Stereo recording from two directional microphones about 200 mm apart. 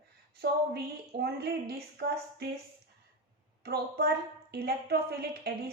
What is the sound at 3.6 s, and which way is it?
A woman's voice, 55° right (ahead or behind).